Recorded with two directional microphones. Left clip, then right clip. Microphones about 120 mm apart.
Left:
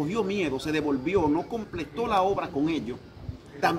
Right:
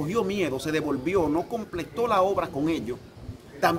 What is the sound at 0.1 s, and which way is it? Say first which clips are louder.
Speech: right 1 dB; 50° right (ahead or behind).